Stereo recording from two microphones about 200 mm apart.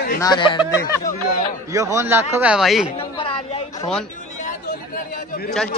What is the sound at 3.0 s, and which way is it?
Chatter, 30° left (ahead or behind).